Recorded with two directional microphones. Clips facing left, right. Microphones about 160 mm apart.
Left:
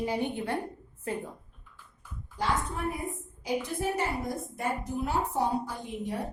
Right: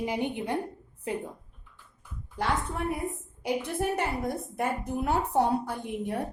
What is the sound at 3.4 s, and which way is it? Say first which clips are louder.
A woman's voice: right 2 dB; 60° right (ahead or behind).